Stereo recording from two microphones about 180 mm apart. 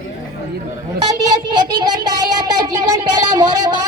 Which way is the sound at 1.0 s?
20° right (ahead or behind).